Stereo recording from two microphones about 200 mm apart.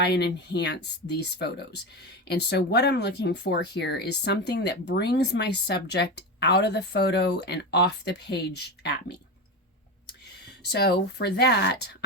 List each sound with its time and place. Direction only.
0.0 s speech: 55° left (ahead or behind)
10.7 s speech: 55° left (ahead or behind)